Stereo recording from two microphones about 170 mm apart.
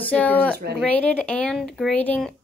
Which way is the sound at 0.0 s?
10° left (ahead or behind).